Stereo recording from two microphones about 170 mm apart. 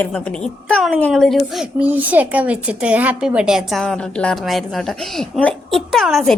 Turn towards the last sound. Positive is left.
turn(degrees=0)  # may be behind; listen again after turning